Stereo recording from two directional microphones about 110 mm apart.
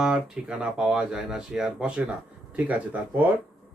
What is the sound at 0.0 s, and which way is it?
Speech, 5° right (ahead or behind).